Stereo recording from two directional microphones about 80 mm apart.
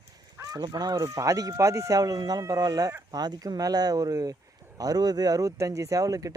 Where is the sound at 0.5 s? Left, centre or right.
Right.